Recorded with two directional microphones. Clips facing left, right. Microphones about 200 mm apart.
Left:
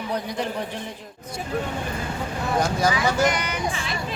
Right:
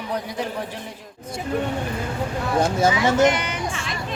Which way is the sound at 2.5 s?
25° right (ahead or behind).